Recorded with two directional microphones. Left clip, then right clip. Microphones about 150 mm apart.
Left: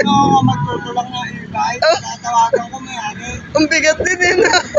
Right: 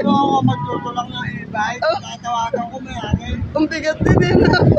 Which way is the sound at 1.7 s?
15° right (ahead or behind).